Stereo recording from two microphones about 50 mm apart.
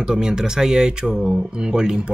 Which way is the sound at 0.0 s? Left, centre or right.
Centre.